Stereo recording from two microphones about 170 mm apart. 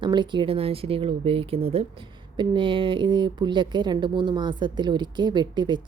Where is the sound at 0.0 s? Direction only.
25° right (ahead or behind).